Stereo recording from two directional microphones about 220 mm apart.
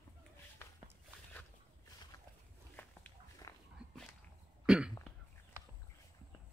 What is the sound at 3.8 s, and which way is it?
Dog, 5° right (ahead or behind).